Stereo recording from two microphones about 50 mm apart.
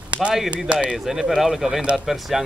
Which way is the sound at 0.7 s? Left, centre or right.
Right.